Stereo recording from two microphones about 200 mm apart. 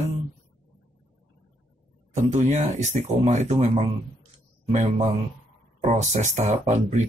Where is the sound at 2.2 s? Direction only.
35° right (ahead or behind).